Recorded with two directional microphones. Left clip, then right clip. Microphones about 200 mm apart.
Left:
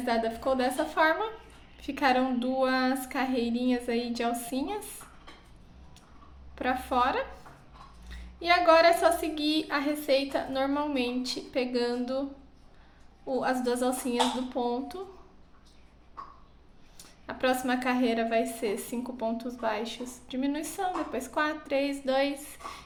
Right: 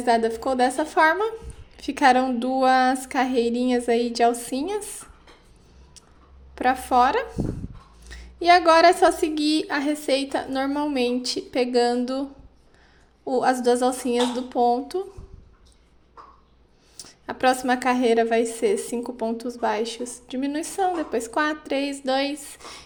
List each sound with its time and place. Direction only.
0.0 s a woman's voice: 45° right (ahead or behind)
6.6 s a woman's voice: 45° right (ahead or behind)
13.2 s a woman's voice: 45° right (ahead or behind)
17.0 s a woman's voice: 45° right (ahead or behind)